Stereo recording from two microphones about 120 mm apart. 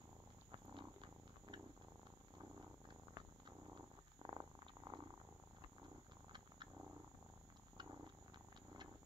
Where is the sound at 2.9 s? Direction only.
40° right (ahead or behind).